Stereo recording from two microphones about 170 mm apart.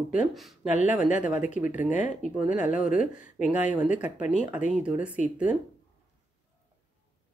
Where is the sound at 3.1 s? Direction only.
10° right (ahead or behind).